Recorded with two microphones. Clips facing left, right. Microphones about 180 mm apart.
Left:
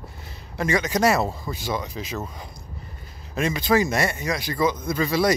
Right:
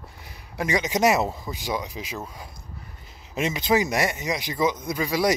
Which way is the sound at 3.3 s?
20° right (ahead or behind).